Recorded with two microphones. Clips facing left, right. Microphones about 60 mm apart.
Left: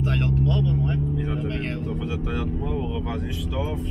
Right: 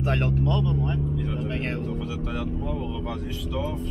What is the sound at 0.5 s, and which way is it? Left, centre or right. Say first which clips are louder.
Speech: left 1 dB; centre.